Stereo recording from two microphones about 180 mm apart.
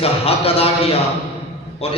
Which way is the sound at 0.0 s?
35° left (ahead or behind).